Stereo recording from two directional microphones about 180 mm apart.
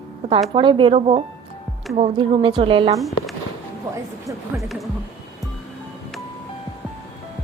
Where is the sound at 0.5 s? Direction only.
30° right (ahead or behind).